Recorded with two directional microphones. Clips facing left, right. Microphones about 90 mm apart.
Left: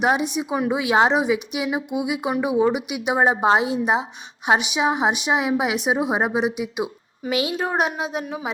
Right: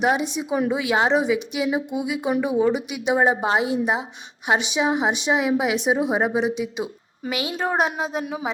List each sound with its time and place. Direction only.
0.0 s a woman's voice: 20° left (ahead or behind)
7.4 s a woman's voice: 30° right (ahead or behind)